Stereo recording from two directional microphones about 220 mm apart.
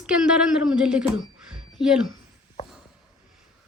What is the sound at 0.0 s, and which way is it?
A woman's voice, 5° right (ahead or behind).